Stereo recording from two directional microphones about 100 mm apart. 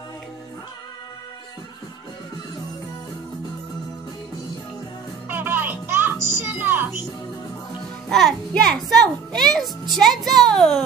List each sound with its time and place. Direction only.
5.3 s music: 20° right (ahead or behind)
8.1 s a child's voice: 5° left (ahead or behind)